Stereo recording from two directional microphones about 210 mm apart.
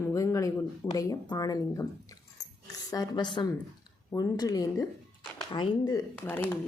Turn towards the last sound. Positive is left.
turn(degrees=10)  # may be behind; listen again after turning